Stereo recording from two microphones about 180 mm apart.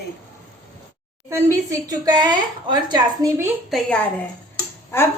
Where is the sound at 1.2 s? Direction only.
15° right (ahead or behind).